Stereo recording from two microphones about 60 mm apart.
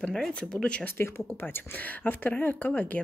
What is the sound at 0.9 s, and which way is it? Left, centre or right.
Speech, left.